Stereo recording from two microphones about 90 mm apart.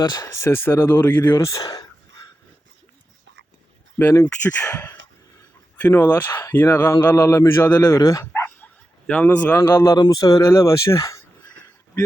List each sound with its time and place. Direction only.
0.0 s speech: 50° left (ahead or behind)
0.4 s speech: 25° left (ahead or behind)
1.4 s speech: 35° left (ahead or behind)
4.1 s speech: 35° left (ahead or behind)
5.7 s speech: 20° left (ahead or behind)
8.3 s bow-wow: 20° left (ahead or behind)
9.6 s speech: 25° left (ahead or behind)
10.0 s speech: 45° left (ahead or behind)